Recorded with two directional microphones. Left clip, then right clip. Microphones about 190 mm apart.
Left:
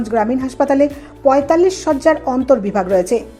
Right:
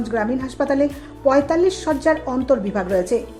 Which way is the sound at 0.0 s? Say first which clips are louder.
Left 5 dB; 20° left (ahead or behind).